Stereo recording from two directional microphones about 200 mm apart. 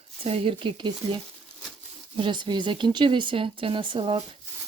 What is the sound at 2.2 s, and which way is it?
Speech, 25° right (ahead or behind).